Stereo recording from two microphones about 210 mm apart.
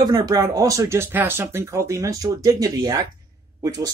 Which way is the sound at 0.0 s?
20° right (ahead or behind).